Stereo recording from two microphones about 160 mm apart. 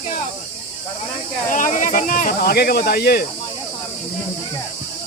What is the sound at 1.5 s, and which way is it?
Speech, 55° left (ahead or behind).